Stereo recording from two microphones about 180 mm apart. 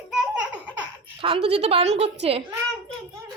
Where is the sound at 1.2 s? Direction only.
30° right (ahead or behind).